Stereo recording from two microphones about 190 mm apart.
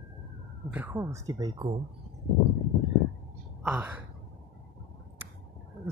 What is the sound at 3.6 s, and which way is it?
Speech, 10° right (ahead or behind).